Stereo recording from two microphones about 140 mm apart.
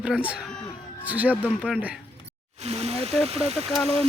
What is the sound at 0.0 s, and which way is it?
Speech, 10° right (ahead or behind).